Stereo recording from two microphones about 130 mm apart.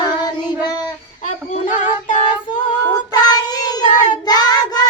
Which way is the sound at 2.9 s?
30° left (ahead or behind).